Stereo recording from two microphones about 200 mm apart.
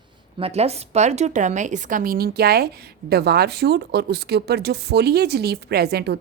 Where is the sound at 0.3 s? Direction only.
30° right (ahead or behind).